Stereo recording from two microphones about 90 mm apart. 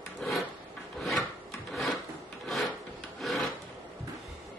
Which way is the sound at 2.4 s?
Centre (ahead or behind).